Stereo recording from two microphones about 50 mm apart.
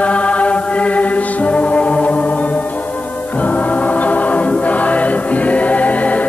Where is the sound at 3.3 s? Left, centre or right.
Left.